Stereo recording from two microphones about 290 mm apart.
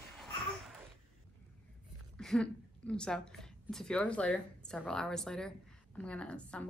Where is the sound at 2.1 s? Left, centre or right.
Centre.